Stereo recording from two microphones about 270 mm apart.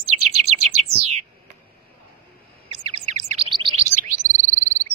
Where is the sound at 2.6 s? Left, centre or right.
Right.